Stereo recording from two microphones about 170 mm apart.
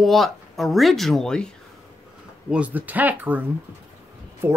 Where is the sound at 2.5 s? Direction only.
10° right (ahead or behind).